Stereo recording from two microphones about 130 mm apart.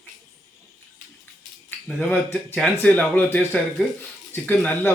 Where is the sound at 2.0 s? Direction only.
15° left (ahead or behind).